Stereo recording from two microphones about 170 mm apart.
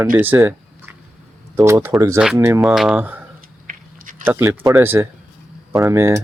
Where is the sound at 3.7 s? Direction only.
50° right (ahead or behind).